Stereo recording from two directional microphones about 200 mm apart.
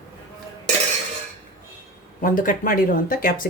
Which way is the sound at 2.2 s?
40° left (ahead or behind).